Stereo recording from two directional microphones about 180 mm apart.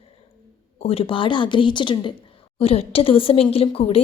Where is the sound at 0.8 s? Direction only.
30° left (ahead or behind).